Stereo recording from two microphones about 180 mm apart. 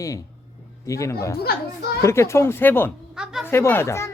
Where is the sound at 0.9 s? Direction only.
15° left (ahead or behind).